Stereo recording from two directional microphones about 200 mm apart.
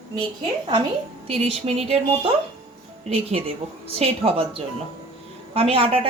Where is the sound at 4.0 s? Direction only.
30° right (ahead or behind).